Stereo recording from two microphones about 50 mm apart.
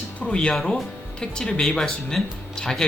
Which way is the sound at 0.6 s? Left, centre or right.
Centre.